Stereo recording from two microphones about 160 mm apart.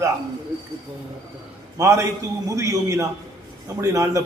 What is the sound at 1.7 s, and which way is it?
A man's voice, 20° right (ahead or behind).